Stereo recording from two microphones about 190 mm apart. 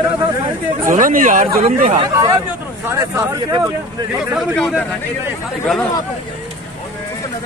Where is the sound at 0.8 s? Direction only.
45° right (ahead or behind).